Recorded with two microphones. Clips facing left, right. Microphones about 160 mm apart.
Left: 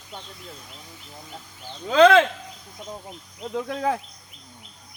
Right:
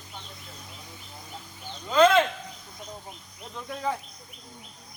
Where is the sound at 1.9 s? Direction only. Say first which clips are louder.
Left 4 dB; 70° left (ahead or behind).